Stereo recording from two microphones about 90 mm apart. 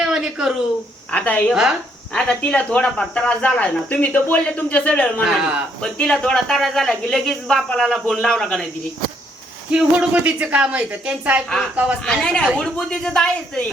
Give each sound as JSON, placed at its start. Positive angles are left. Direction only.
{"t": 0.0, "sound": "a sound", "side_deg": -10}
{"t": 1.1, "sound": "speech", "side_deg": 15}
{"t": 5.2, "sound": "speech", "side_deg": -5}
{"t": 5.8, "sound": "speech", "side_deg": 10}
{"t": 9.7, "sound": "a woman's voice", "side_deg": -15}
{"t": 11.4, "sound": "speech", "side_deg": 5}